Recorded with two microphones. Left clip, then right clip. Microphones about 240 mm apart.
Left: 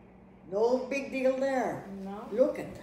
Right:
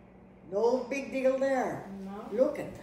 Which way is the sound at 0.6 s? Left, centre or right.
Centre.